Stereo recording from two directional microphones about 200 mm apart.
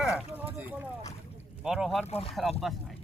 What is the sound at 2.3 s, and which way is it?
Speech, centre (ahead or behind).